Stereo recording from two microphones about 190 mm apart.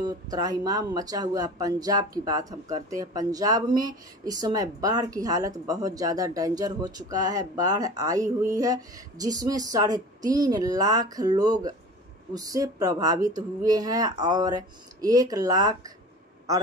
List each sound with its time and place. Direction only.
0.0 s speech: 20° right (ahead or behind)